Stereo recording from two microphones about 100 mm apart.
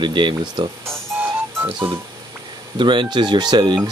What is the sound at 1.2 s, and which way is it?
Music, 20° right (ahead or behind).